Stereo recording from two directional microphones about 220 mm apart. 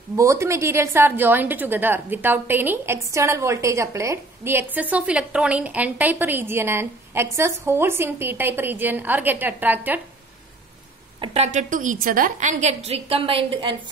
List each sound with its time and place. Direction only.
0.1 s a woman's voice: 15° right (ahead or behind)
11.1 s a woman's voice: 30° right (ahead or behind)